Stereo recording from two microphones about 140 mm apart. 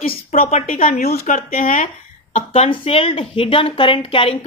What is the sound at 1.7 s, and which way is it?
Speech, 65° left (ahead or behind).